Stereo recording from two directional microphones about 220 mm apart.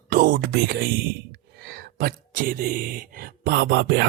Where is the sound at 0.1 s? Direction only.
40° right (ahead or behind).